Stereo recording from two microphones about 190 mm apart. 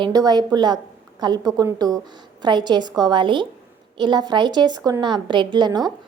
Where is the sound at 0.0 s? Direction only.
20° right (ahead or behind).